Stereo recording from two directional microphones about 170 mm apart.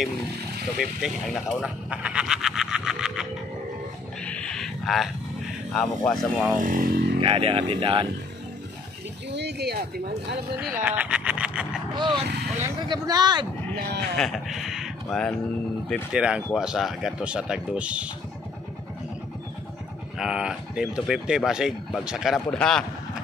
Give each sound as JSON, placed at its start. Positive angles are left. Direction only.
{"t": 0.7, "sound": "speech", "side_deg": 0}
{"t": 4.2, "sound": "a sound", "side_deg": 5}
{"t": 5.7, "sound": "speech", "side_deg": 5}
{"t": 6.6, "sound": "speech", "side_deg": -55}
{"t": 7.2, "sound": "speech", "side_deg": -30}
{"t": 9.3, "sound": "speech", "side_deg": -80}
{"t": 10.9, "sound": "a sound", "side_deg": -5}
{"t": 11.9, "sound": "speech", "side_deg": -25}
{"t": 13.7, "sound": "speech", "side_deg": -70}
{"t": 14.1, "sound": "speech", "side_deg": 0}
{"t": 20.2, "sound": "speech", "side_deg": -5}